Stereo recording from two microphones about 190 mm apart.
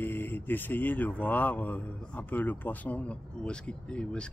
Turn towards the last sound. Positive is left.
turn(degrees=5)  # may be behind; listen again after turning